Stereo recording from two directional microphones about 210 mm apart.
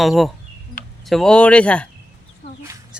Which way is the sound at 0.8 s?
40° left (ahead or behind).